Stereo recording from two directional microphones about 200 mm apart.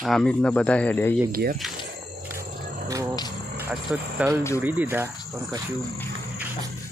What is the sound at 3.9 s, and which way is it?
Speech, 5° right (ahead or behind).